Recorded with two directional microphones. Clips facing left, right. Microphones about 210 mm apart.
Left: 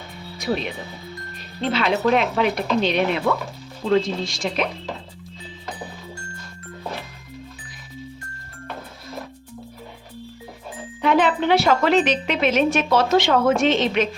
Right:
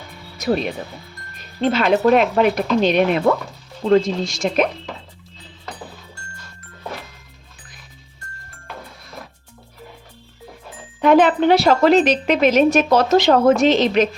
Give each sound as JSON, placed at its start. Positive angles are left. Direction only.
{"t": 0.3, "sound": "speech", "side_deg": -45}
{"t": 1.7, "sound": "speech", "side_deg": -45}
{"t": 11.0, "sound": "a woman's voice", "side_deg": -45}